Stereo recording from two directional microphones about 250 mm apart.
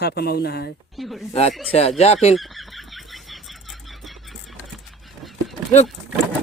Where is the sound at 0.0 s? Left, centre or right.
Left.